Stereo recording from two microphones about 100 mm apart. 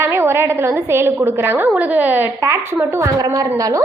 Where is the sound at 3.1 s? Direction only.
35° right (ahead or behind).